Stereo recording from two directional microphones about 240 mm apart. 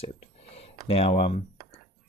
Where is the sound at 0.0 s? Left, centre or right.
Left.